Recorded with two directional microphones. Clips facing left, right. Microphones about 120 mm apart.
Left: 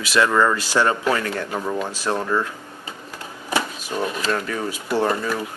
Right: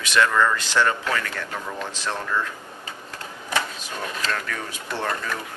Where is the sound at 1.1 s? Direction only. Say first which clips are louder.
Left 4 dB; 30° left (ahead or behind).